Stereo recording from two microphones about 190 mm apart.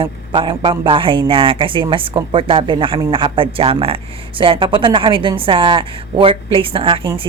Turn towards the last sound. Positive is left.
turn(degrees=-25)  # may be behind; listen again after turning